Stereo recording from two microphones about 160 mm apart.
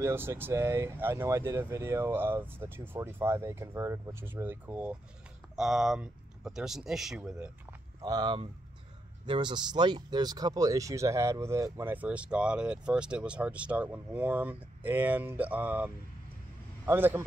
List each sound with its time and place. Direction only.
0.0 s speech: 15° right (ahead or behind)
8.0 s speech: 25° right (ahead or behind)